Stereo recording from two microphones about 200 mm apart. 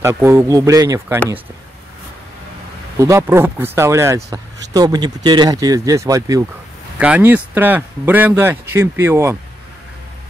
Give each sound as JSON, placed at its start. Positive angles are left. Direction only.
{"t": 0.0, "sound": "speech", "side_deg": -15}
{"t": 3.0, "sound": "speech", "side_deg": -15}